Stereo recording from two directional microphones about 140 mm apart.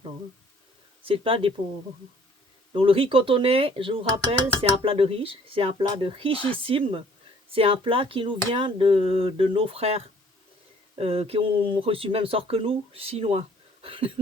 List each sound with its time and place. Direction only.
1.0 s speech: 40° right (ahead or behind)
2.7 s speech: 40° right (ahead or behind)